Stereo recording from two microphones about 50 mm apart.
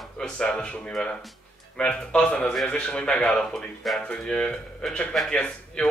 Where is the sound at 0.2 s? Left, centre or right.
Centre.